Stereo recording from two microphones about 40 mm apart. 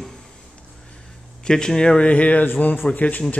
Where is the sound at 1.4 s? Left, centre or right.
Centre.